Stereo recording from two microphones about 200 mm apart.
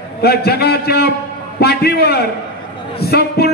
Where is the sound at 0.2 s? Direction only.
50° left (ahead or behind).